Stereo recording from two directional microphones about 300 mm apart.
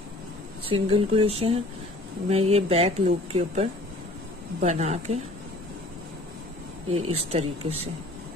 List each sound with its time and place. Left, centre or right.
0.7 s speech: centre
6.9 s speech: centre